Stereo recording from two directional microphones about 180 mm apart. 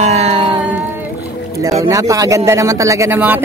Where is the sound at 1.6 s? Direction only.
20° right (ahead or behind).